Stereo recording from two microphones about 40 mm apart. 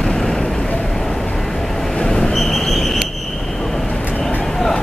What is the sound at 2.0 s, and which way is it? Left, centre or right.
Train, centre.